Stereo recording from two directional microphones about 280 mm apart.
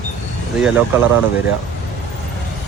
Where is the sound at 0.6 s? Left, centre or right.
Centre.